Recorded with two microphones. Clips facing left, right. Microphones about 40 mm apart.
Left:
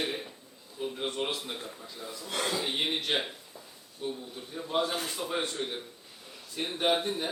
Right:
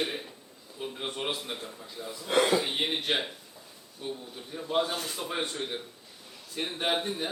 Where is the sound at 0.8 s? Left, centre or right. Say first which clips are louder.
Left 1 dB; centre.